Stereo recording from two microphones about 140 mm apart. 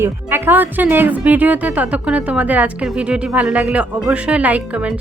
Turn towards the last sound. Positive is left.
turn(degrees=-10)  # may be behind; listen again after turning